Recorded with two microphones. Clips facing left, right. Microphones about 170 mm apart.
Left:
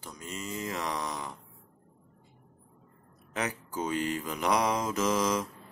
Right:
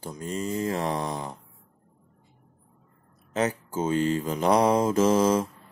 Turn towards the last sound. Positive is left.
turn(degrees=-30)  # may be behind; listen again after turning